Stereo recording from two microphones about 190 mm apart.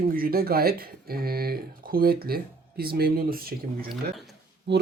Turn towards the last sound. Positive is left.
turn(degrees=-65)  # may be behind; listen again after turning